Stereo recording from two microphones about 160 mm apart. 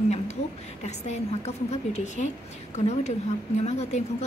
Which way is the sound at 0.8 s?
45° left (ahead or behind).